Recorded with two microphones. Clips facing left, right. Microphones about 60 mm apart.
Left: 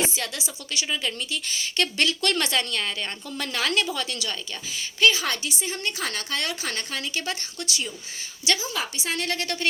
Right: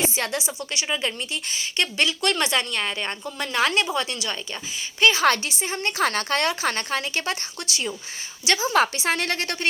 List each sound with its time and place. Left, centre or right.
0.1 s a woman's voice: right; by 2.5 s centre
2.5 s a woman's voice: right
3.3 s a woman's voice: centre; by 5.2 s right
5.2 s a woman's voice: right
5.5 s a woman's voice: right
8.7 s speech: right